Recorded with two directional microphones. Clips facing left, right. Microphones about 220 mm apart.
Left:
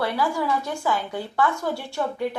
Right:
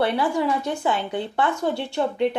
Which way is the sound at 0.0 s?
25° right (ahead or behind).